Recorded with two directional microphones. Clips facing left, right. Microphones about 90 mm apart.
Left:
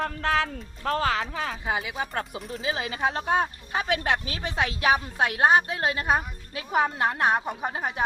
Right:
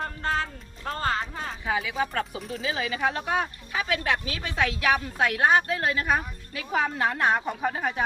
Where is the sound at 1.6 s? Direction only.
30° left (ahead or behind).